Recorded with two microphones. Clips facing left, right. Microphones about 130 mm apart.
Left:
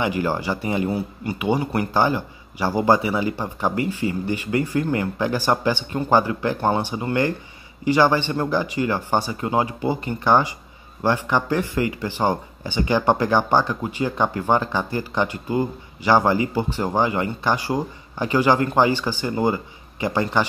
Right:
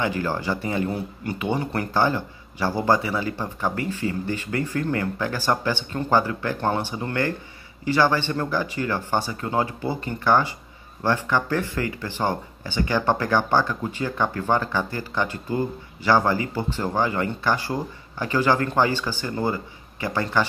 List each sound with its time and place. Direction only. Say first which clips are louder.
0.0 s speech: left 2 dB; 15° left (ahead or behind)